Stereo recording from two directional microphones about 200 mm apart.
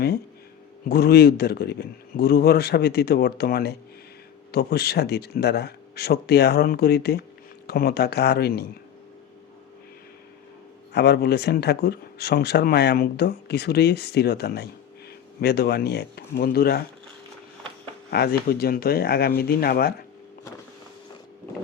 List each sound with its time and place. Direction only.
0.9 s speech: 50° left (ahead or behind)
10.9 s speech: 55° left (ahead or behind)
18.1 s speech: 50° left (ahead or behind)